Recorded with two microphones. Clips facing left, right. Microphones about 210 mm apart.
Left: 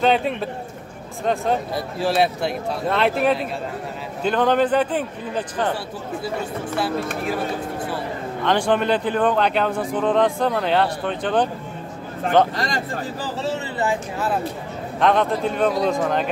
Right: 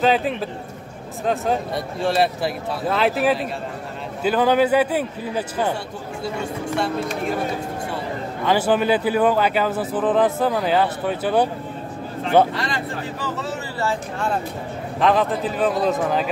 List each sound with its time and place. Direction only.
0.0 s a man's voice: centre (ahead or behind)
8.5 s speech: 5° right (ahead or behind)
12.5 s speech: 40° left (ahead or behind)
13.4 s speech: 25° left (ahead or behind)
15.0 s speech: centre (ahead or behind)